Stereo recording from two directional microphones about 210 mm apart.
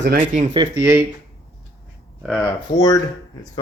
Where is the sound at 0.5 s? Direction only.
15° right (ahead or behind).